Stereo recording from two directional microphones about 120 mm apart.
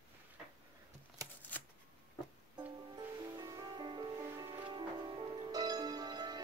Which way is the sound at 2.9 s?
30° right (ahead or behind).